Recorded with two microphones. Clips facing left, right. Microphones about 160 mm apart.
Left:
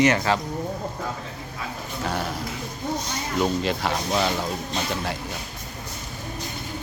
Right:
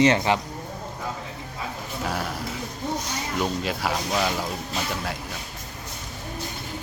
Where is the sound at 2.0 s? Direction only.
5° right (ahead or behind).